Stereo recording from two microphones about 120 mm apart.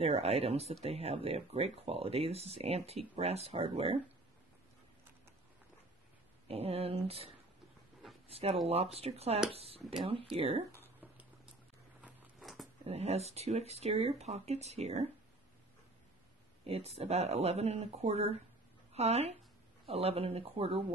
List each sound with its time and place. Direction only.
0.0 s speech: 55° right (ahead or behind)
6.4 s speech: 55° right (ahead or behind)
8.3 s speech: 55° right (ahead or behind)
12.4 s dog: centre (ahead or behind)
12.8 s speech: 60° right (ahead or behind)
16.6 s speech: 55° right (ahead or behind)